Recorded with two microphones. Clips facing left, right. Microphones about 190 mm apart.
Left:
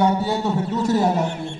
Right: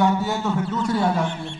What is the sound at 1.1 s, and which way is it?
Speech, 20° left (ahead or behind).